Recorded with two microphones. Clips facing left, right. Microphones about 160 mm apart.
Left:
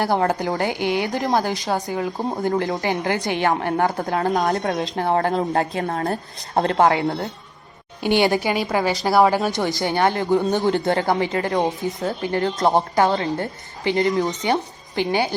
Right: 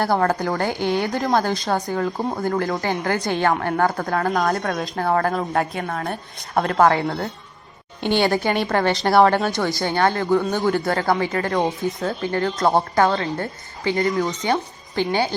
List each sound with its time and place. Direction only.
0.0 s a woman's voice: 15° left (ahead or behind); by 6.1 s 40° left (ahead or behind)
6.5 s a woman's voice: 25° left (ahead or behind); by 9.5 s 5° left (ahead or behind)
9.5 s a woman's voice: 20° left (ahead or behind)